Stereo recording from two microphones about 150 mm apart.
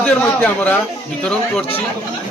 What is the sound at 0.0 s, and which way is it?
A man's voice, 10° left (ahead or behind).